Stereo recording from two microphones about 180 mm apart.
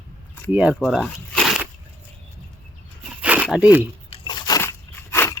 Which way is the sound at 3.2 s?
10° right (ahead or behind).